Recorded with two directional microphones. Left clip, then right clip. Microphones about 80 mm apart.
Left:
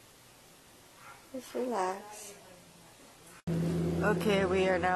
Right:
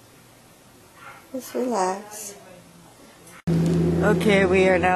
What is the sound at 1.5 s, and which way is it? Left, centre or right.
Speech, centre.